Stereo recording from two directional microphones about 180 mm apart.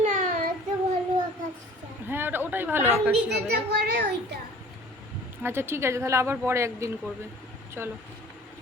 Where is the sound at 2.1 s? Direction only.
10° right (ahead or behind).